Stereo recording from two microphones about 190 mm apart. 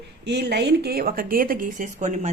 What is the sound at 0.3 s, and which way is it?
A woman's voice, 60° right (ahead or behind).